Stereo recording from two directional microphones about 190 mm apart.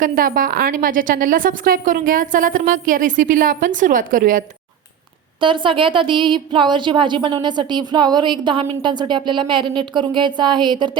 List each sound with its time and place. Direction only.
0.0 s a woman's voice: 50° right (ahead or behind)
5.4 s speech: 25° right (ahead or behind)